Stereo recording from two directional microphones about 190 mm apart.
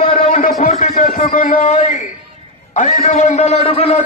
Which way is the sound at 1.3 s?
45° left (ahead or behind).